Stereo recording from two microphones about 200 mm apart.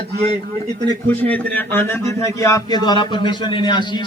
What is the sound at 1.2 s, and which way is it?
A man's voice, 10° left (ahead or behind).